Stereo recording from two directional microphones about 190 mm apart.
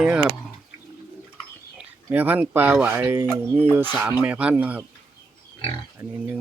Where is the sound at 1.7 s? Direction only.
10° right (ahead or behind).